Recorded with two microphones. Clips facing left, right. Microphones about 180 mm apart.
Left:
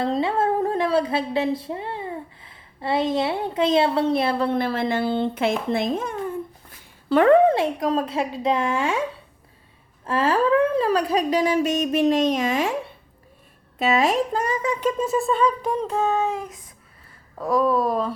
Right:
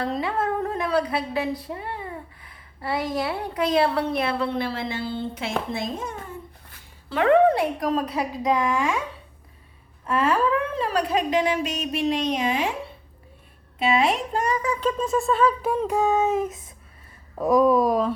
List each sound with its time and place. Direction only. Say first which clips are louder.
0.0 s humming: left 4 dB; 25° left (ahead or behind)
4.5 s speech: left 5 dB; 50° left (ahead or behind)
7.4 s speech: left 1 dB; 25° left (ahead or behind)
10.1 s speech: left 2 dB; 30° left (ahead or behind)
13.7 s a child's voice: left 2 dB; 40° left (ahead or behind)
14.6 s a sound: left 2 dB; 20° left (ahead or behind)
14.8 s speech: left 1 dB; 5° left (ahead or behind); by 18.1 s 10° right (ahead or behind)